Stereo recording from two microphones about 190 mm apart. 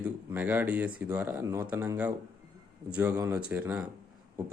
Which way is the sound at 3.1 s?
10° right (ahead or behind).